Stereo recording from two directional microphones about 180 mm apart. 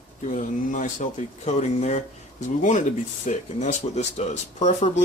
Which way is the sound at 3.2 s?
40° left (ahead or behind).